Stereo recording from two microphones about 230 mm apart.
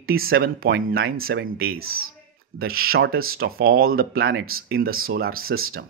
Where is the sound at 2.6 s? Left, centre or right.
Right.